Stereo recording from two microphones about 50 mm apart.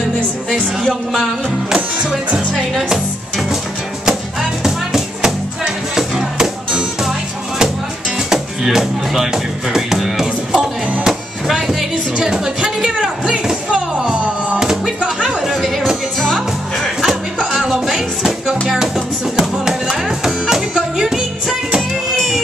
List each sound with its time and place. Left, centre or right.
2.7 s music: centre
8.3 s speech: centre
15.2 s music: centre
17.6 s music: centre
22.1 s music: centre